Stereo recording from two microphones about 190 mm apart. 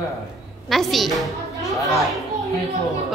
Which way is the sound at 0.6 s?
Centre (ahead or behind).